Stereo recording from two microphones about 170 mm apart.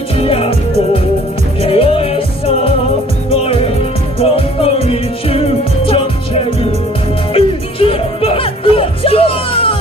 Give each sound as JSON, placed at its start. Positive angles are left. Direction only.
{"t": 0.2, "sound": "music", "side_deg": 35}
{"t": 1.6, "sound": "music", "side_deg": 35}